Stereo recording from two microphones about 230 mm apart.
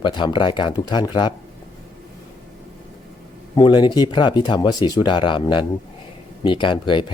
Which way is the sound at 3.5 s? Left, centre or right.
Centre.